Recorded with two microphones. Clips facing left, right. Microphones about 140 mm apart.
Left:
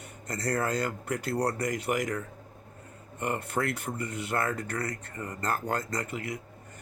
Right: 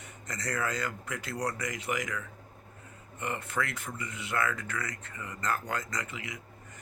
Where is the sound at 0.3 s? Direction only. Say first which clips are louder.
Left 4 dB; 35° left (ahead or behind).